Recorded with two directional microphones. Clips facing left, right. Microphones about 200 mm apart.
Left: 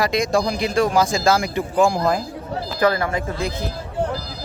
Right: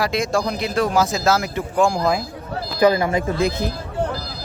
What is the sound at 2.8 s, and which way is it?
Speech, 15° right (ahead or behind).